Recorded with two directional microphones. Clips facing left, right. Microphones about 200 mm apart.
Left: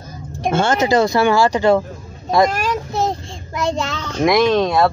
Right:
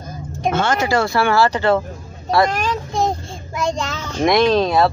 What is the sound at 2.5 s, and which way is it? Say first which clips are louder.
Child singing: left 1 dB; 10° left (ahead or behind).